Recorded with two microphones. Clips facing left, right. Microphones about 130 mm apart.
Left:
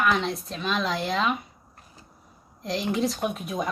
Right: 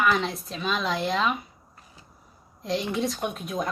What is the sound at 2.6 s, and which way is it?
A woman's voice, centre (ahead or behind).